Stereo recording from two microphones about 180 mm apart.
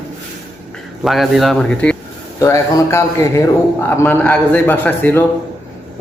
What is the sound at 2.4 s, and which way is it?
A man's voice, 20° left (ahead or behind).